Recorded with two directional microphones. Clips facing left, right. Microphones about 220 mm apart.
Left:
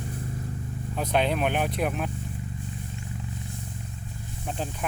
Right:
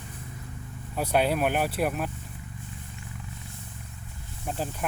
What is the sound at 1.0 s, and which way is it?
Speech, 10° right (ahead or behind).